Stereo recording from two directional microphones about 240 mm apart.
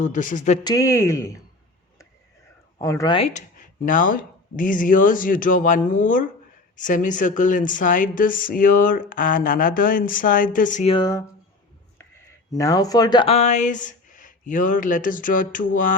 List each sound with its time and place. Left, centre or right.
0.0 s a woman's voice: left
0.6 s speech: centre
2.7 s a woman's voice: centre
12.5 s a woman's voice: centre; by 16.0 s left